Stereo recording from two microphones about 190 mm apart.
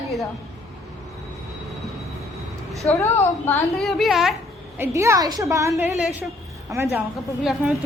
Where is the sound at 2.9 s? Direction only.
15° left (ahead or behind).